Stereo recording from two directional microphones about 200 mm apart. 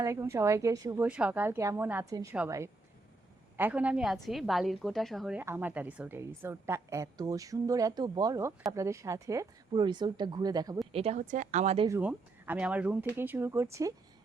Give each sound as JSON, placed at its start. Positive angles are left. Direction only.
{"t": 0.0, "sound": "a woman's voice", "side_deg": -15}
{"t": 1.0, "sound": "a woman's voice", "side_deg": -5}
{"t": 10.9, "sound": "speech", "side_deg": -30}
{"t": 11.9, "sound": "a woman's voice", "side_deg": -10}